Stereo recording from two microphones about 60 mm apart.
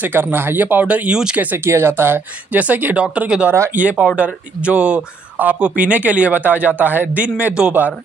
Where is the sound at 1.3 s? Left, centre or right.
Right.